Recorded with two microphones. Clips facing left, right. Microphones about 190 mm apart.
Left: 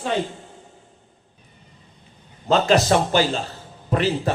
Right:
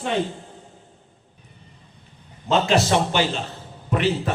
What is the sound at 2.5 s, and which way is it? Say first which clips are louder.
A man's voice: left 2 dB; 40° left (ahead or behind).